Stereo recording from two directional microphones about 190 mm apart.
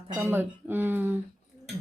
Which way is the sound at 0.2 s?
10° right (ahead or behind).